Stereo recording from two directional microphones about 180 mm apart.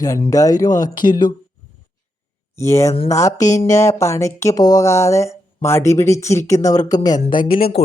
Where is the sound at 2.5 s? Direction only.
15° left (ahead or behind).